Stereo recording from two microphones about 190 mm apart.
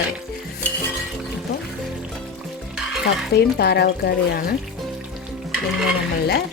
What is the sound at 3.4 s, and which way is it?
Speech, 55° left (ahead or behind).